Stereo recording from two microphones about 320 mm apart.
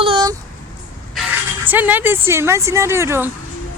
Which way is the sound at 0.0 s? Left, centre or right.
Centre.